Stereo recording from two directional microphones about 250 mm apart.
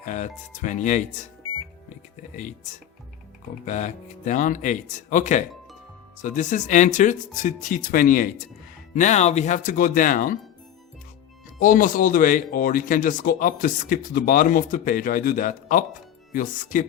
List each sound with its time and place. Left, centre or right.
0.0 s speech: left
2.3 s speech: left
11.6 s speech: left